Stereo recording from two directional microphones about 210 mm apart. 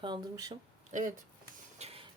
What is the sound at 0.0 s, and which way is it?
Speech, 20° right (ahead or behind).